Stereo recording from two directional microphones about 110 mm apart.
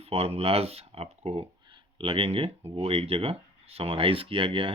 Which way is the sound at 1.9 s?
55° right (ahead or behind).